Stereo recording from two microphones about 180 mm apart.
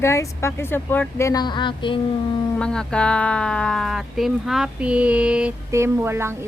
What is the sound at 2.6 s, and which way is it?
Speech, 5° left (ahead or behind).